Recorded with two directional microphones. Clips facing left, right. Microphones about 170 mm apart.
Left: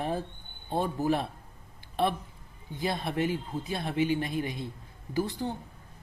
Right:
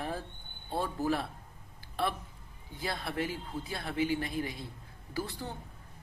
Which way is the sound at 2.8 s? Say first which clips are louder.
Left 5 dB; 20° left (ahead or behind).